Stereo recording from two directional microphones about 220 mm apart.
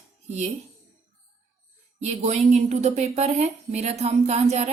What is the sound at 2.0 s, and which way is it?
A woman's voice, 30° right (ahead or behind).